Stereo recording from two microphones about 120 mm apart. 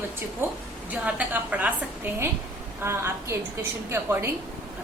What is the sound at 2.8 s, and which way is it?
A woman's voice, 20° right (ahead or behind).